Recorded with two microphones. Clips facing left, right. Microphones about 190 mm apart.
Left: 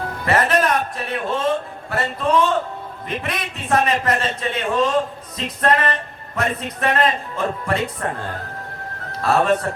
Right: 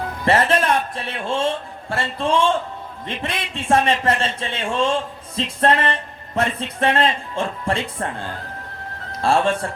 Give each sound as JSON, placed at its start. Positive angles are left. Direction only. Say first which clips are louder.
{"t": 0.3, "sound": "a man's voice", "louder": "right 1 dB", "side_deg": -30}